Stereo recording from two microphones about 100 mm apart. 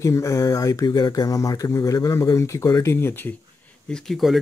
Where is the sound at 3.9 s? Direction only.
5° left (ahead or behind).